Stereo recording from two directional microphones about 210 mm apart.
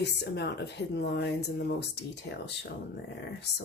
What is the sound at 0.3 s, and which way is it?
Speech, 50° left (ahead or behind).